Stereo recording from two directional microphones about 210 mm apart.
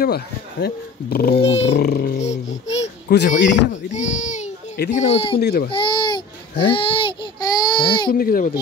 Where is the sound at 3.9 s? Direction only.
35° left (ahead or behind).